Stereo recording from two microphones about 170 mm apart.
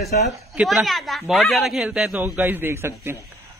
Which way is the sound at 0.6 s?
Centre (ahead or behind).